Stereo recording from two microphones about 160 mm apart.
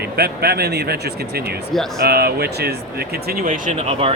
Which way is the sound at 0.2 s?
85° right.